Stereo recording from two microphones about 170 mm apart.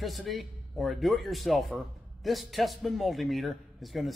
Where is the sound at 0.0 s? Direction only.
Centre (ahead or behind).